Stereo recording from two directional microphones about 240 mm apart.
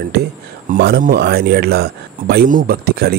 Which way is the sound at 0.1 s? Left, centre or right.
Right.